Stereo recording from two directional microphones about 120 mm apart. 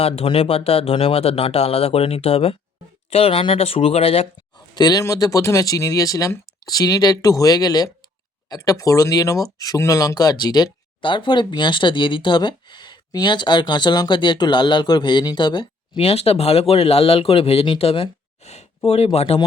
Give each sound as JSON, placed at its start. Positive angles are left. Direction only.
{"t": 0.0, "sound": "speech", "side_deg": 55}
{"t": 4.7, "sound": "speech", "side_deg": 35}